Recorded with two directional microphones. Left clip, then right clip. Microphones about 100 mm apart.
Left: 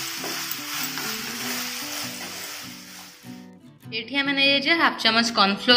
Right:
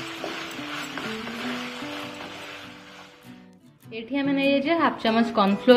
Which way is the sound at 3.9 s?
45° right (ahead or behind).